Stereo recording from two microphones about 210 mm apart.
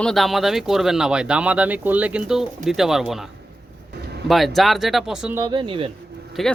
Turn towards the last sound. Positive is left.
turn(degrees=0)  # may be behind; listen again after turning